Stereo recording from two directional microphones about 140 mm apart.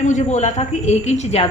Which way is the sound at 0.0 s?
60° left (ahead or behind).